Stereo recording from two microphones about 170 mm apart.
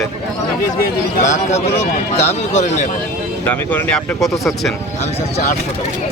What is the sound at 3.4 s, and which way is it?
Speech, 10° left (ahead or behind).